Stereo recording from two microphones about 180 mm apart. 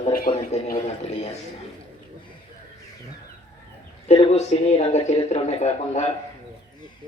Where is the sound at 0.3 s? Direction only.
30° left (ahead or behind).